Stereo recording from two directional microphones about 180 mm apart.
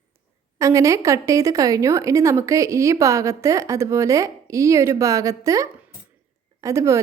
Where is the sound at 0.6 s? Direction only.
15° right (ahead or behind).